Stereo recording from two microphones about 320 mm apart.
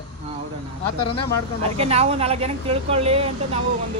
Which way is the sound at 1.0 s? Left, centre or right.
Centre.